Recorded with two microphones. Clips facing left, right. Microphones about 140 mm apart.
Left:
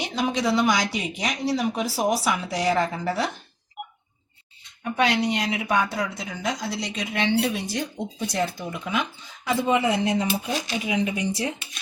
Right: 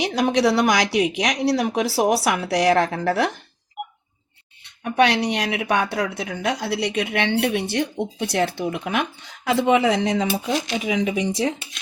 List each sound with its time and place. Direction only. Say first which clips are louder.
0.0 s speech: right 6 dB; 70° right (ahead or behind)
4.6 s speech: right 5 dB; 70° right (ahead or behind); by 11.8 s 90° right